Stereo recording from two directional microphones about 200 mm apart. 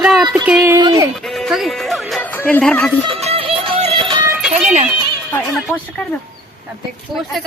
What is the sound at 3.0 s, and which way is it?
Music, 30° right (ahead or behind).